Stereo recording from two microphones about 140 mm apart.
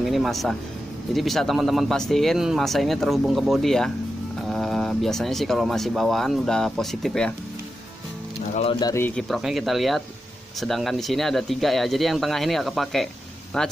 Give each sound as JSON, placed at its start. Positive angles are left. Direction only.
{"t": 0.0, "sound": "speech", "side_deg": 0}
{"t": 8.7, "sound": "speech", "side_deg": 30}
{"t": 9.0, "sound": "speech", "side_deg": 5}